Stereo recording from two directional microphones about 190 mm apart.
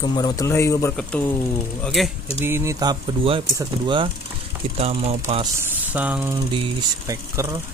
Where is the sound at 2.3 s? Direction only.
15° right (ahead or behind); by 5.5 s 30° right (ahead or behind).